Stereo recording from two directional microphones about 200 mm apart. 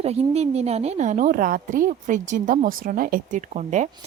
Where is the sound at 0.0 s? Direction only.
30° right (ahead or behind).